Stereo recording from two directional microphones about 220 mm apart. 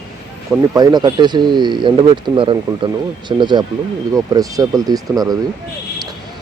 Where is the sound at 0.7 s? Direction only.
15° right (ahead or behind).